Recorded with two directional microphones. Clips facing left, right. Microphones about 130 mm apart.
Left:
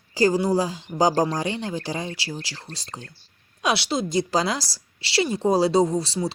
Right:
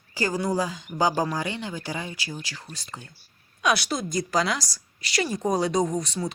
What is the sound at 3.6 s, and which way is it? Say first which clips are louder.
A woman's voice: left 1 dB; 25° left (ahead or behind).